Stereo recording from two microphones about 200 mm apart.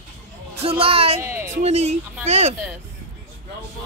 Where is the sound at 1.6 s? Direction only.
35° right (ahead or behind).